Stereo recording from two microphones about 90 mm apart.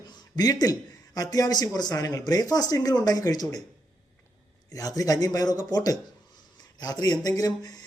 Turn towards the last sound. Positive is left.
turn(degrees=50)  # may be behind; listen again after turning